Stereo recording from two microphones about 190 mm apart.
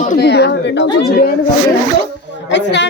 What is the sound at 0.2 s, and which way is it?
Speech, 60° left (ahead or behind).